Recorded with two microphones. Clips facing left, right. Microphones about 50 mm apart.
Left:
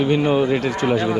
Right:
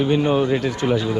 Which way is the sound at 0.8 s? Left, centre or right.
Left.